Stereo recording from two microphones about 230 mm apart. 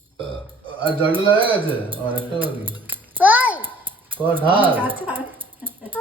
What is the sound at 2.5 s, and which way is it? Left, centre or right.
Babbling, centre.